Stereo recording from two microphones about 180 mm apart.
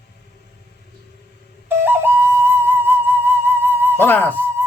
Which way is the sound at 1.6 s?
10° right (ahead or behind).